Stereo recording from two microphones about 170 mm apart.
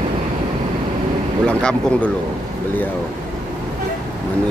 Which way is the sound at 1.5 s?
5° left (ahead or behind).